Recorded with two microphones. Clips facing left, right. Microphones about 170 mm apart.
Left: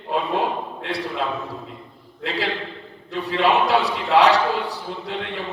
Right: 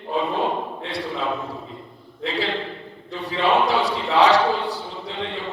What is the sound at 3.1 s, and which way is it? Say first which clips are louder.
A man's voice: left 1 dB; 65° left (ahead or behind).